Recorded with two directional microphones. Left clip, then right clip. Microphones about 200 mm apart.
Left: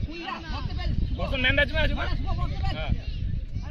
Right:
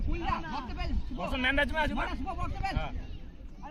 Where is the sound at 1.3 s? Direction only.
25° right (ahead or behind).